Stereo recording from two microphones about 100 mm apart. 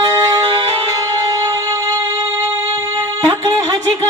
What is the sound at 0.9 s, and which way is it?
Music, 35° right (ahead or behind).